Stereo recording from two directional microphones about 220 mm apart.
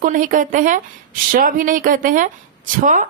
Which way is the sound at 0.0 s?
35° right (ahead or behind).